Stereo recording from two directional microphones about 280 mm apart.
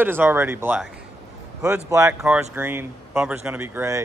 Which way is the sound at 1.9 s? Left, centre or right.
Centre.